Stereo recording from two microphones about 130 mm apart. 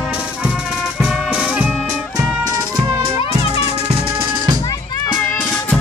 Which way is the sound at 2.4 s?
40° right (ahead or behind).